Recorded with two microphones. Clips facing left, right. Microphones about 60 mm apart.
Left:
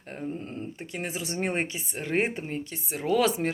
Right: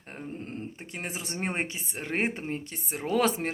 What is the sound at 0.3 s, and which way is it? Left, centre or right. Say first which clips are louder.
A woman's voice: left 2 dB; right.